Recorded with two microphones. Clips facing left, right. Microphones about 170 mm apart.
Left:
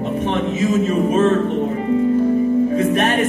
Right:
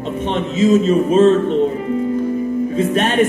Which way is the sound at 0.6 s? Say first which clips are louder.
Right 6 dB; 25° right (ahead or behind).